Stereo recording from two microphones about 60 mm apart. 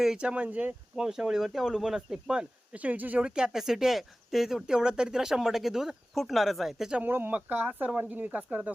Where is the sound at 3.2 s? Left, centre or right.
Centre.